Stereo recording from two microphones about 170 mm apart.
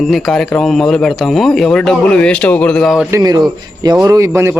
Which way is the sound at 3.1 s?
20° right (ahead or behind).